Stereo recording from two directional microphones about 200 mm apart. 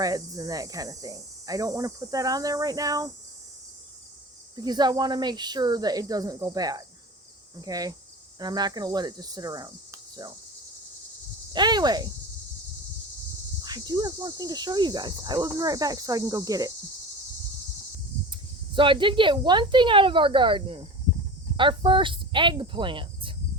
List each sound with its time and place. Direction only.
0.0 s speech: 15° right (ahead or behind)
4.5 s speech: 20° right (ahead or behind)
11.5 s speech: 20° right (ahead or behind)
13.6 s speech: 20° right (ahead or behind)
18.3 s speech: 25° right (ahead or behind)